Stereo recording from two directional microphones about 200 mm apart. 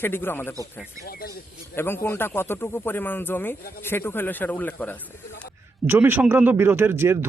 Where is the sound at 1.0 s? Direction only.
50° left (ahead or behind).